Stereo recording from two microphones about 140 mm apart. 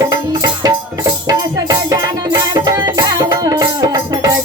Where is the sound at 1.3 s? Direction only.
25° right (ahead or behind).